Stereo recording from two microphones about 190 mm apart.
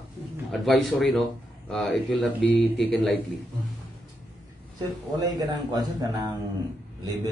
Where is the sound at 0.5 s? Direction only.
Centre (ahead or behind).